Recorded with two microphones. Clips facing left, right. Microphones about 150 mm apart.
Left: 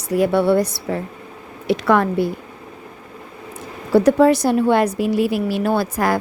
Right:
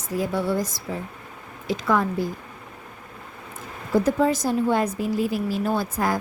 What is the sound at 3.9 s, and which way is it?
A woman's voice, 75° left (ahead or behind).